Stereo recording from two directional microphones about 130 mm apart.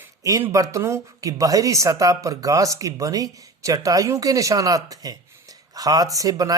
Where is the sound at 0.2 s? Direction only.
25° right (ahead or behind).